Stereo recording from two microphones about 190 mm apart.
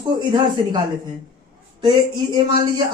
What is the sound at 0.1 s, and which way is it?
Speech, 25° right (ahead or behind).